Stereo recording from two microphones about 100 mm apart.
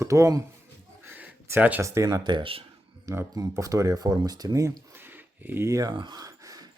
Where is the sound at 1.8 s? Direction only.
30° right (ahead or behind).